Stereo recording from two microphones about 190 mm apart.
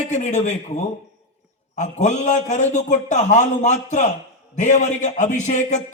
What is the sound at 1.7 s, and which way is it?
A man's voice, 40° left (ahead or behind).